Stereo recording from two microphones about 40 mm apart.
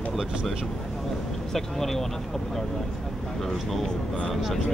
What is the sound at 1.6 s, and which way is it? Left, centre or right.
Speech, centre.